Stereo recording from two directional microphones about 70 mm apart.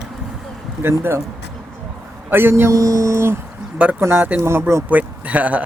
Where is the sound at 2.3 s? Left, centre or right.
Right.